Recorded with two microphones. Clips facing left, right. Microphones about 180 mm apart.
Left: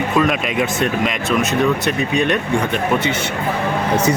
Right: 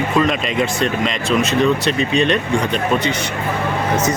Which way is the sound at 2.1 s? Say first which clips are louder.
Even; 15° left (ahead or behind).